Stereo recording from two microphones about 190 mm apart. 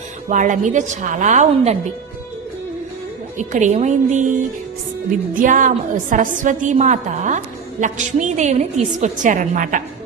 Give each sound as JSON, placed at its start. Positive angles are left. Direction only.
{"t": 0.3, "sound": "a woman's voice", "side_deg": -40}
{"t": 3.3, "sound": "a woman's voice", "side_deg": -40}
{"t": 5.4, "sound": "a woman's voice", "side_deg": -45}